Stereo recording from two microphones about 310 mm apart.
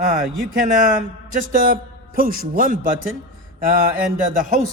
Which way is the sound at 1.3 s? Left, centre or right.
Right.